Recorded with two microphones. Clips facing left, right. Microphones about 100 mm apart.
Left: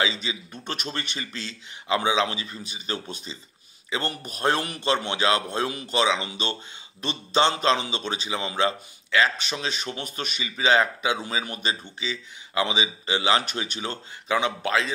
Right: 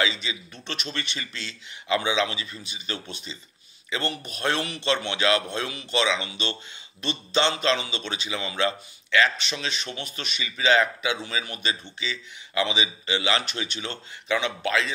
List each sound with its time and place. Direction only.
0.0 s a man's voice: 35° left (ahead or behind)
9.5 s a man's voice: 45° left (ahead or behind)